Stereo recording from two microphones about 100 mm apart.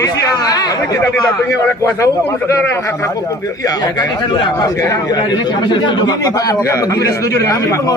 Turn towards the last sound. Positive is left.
turn(degrees=30)  # may be behind; listen again after turning